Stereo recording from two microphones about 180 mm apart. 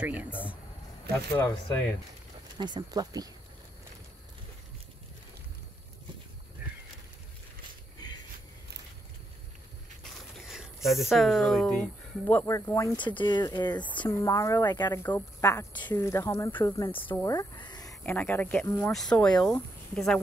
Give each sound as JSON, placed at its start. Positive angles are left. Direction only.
{"t": 0.0, "sound": "speech", "side_deg": -10}
{"t": 1.3, "sound": "speech", "side_deg": 15}
{"t": 2.5, "sound": "speech", "side_deg": -25}
{"t": 10.3, "sound": "a sound", "side_deg": 0}
{"t": 10.9, "sound": "speech", "side_deg": 0}
{"t": 17.2, "sound": "bleat", "side_deg": 15}
{"t": 18.0, "sound": "speech", "side_deg": 10}